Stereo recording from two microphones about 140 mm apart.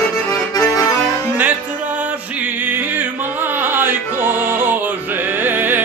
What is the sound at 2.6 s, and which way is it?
Music, 15° right (ahead or behind).